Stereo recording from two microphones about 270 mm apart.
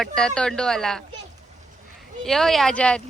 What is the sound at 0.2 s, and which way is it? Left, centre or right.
Speech, centre.